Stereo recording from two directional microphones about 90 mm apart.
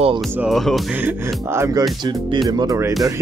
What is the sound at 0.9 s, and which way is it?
Speech, 25° right (ahead or behind).